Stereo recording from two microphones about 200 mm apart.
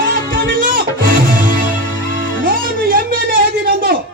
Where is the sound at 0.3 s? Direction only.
45° right (ahead or behind).